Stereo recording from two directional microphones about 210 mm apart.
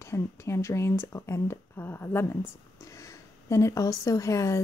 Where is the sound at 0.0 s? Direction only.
15° left (ahead or behind).